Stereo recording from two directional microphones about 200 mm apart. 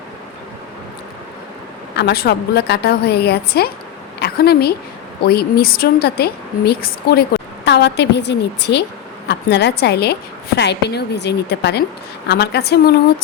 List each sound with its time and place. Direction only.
2.0 s a woman's voice: 55° left (ahead or behind)
4.2 s a sound: 50° left (ahead or behind)
5.2 s a woman's voice: 50° left (ahead or behind)